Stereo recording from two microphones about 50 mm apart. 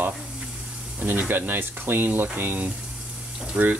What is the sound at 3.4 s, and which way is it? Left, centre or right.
Speech, right.